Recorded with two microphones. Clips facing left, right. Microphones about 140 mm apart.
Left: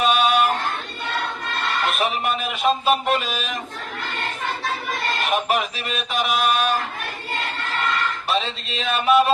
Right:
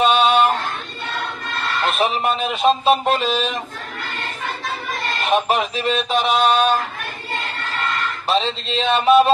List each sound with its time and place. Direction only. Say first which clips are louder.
0.0 s a sound: right 3 dB; 25° right (ahead or behind)
1.9 s speech: right 6 dB; 30° right (ahead or behind)
5.3 s speech: right 5 dB; 30° right (ahead or behind)
8.3 s speech: right 7 dB; 30° right (ahead or behind)